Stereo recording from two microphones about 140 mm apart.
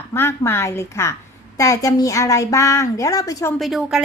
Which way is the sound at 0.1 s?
15° left (ahead or behind).